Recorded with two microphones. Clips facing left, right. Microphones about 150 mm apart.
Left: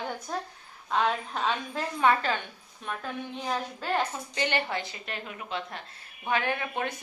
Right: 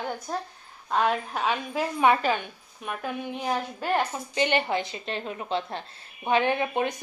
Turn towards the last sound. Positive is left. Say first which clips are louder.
# right 5 dB
turn(degrees=-20)  # may be behind; listen again after turning